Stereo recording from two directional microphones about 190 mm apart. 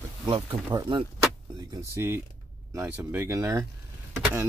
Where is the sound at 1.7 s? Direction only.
10° right (ahead or behind).